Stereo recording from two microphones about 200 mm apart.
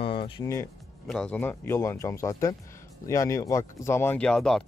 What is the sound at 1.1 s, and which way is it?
Speech, 5° left (ahead or behind).